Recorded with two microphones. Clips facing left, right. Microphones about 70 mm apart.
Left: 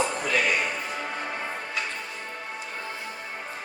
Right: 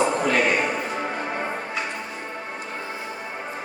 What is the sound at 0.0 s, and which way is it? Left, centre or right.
Music, right.